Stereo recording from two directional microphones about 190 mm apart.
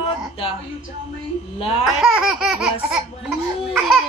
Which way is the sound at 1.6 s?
30° left (ahead or behind).